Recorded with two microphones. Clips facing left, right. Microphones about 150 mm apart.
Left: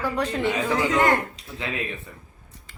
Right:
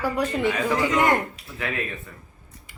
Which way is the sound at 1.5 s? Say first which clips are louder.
Right 1 dB; 20° left (ahead or behind).